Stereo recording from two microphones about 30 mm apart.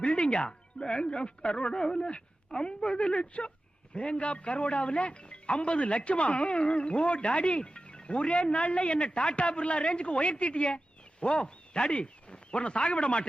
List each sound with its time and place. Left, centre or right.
0.0 s music: left
0.4 s speech: left